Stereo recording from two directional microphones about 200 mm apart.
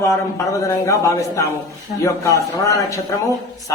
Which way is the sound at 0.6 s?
15° left (ahead or behind).